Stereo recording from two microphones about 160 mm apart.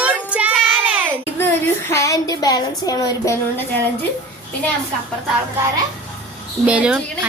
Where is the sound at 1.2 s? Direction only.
15° left (ahead or behind).